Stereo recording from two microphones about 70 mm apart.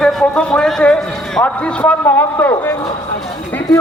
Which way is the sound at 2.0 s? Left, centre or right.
Left.